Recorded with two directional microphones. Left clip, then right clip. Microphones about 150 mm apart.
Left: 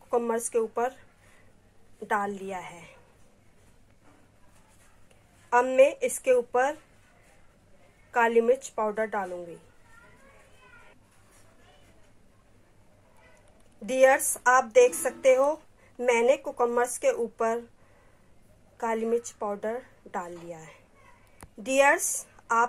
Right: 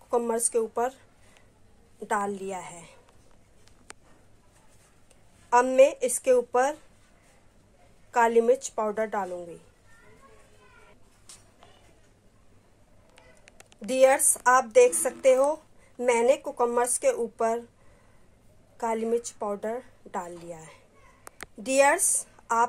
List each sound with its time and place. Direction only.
0.2 s speech: 20° right (ahead or behind)
2.3 s speech: 20° right (ahead or behind)
5.5 s a woman's voice: 5° right (ahead or behind)
8.1 s a woman's voice: 5° right (ahead or behind)
13.8 s a woman's voice: centre (ahead or behind)
18.8 s a woman's voice: 5° right (ahead or behind)